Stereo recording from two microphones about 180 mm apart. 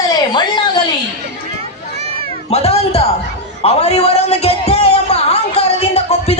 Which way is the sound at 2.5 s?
35° left (ahead or behind).